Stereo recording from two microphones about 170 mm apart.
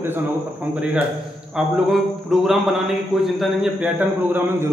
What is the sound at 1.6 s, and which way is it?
A man's voice, centre (ahead or behind).